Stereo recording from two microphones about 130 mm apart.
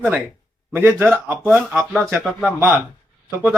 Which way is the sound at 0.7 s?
15° right (ahead or behind).